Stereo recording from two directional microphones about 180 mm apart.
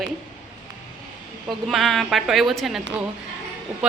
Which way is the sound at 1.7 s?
Centre (ahead or behind).